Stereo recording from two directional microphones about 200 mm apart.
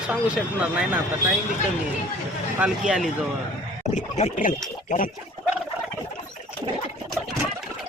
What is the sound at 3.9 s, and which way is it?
Speech, 35° left (ahead or behind).